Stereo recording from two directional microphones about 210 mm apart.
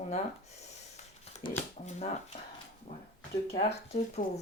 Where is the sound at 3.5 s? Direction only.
30° left (ahead or behind).